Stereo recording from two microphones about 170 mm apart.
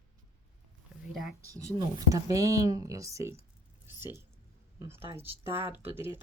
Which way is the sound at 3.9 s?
15° right (ahead or behind).